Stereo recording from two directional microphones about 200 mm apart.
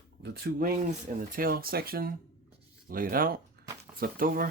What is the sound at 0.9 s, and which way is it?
Speech, 45° right (ahead or behind).